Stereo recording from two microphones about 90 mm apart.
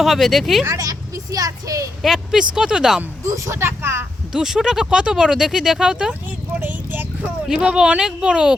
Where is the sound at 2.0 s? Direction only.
5° right (ahead or behind).